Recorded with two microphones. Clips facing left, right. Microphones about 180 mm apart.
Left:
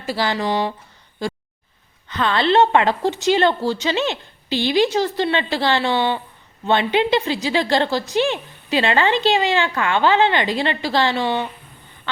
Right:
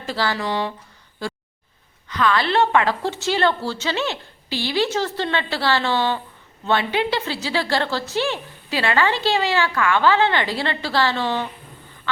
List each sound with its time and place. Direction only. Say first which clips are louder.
0.0 s a woman's voice: left 2 dB; 10° left (ahead or behind)
2.0 s a woman's voice: left 2 dB; 25° left (ahead or behind)